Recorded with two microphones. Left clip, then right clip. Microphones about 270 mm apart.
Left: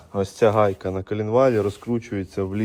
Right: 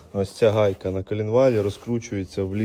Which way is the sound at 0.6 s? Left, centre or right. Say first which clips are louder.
Even; left.